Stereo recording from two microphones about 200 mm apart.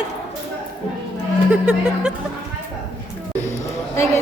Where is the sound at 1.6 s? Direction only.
5° right (ahead or behind).